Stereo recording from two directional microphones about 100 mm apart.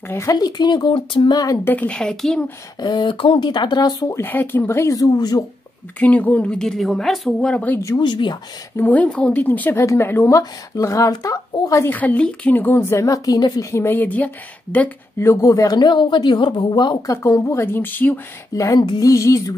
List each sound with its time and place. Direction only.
0.1 s a woman's voice: 30° left (ahead or behind)
0.4 s speech: 45° left (ahead or behind); by 1.3 s 60° left (ahead or behind)
1.3 s a sound: 40° left (ahead or behind)
1.6 s speech: 20° left (ahead or behind)
2.8 s speech: 50° left (ahead or behind)
4.1 s a woman's voice: 20° left (ahead or behind); by 5.4 s 40° left (ahead or behind)
5.9 s speech: 15° left (ahead or behind)
8.0 s speech: 50° left (ahead or behind)
8.7 s a woman's voice: 15° left (ahead or behind); by 11.8 s 35° left (ahead or behind)
11.8 s a woman's voice: 20° left (ahead or behind)
18.5 s a sound: 35° left (ahead or behind)